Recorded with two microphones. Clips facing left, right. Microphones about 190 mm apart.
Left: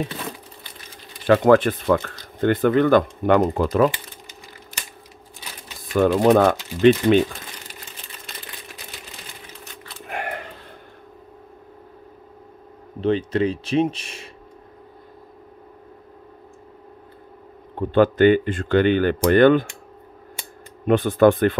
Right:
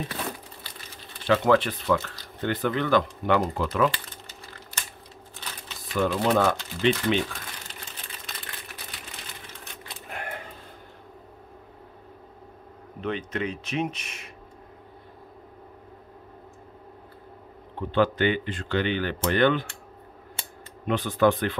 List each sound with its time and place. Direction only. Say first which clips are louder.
1.2 s speech: left 6 dB; 50° left (ahead or behind)
3.9 s crumpling: left 1 dB; 15° left (ahead or behind)
5.9 s speech: left 8 dB; 50° left (ahead or behind)
10.0 s a sound: left 7 dB; 80° left
13.0 s speech: left 9 dB; 30° left (ahead or behind)
17.7 s speech: left 7 dB; 50° left (ahead or behind)
20.8 s speech: left 7 dB; 50° left (ahead or behind)